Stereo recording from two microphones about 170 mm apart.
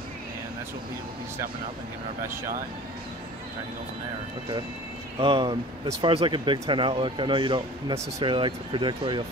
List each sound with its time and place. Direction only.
5.2 s speech: 30° right (ahead or behind)